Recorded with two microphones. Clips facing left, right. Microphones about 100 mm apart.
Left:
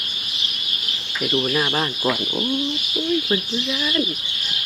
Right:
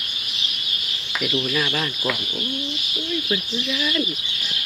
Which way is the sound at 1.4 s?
30° left (ahead or behind).